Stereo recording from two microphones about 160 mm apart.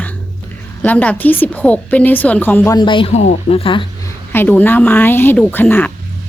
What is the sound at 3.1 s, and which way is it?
Speech, 40° left (ahead or behind).